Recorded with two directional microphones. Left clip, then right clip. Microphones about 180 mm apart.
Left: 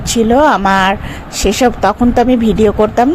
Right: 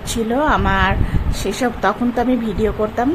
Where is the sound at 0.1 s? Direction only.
30° left (ahead or behind).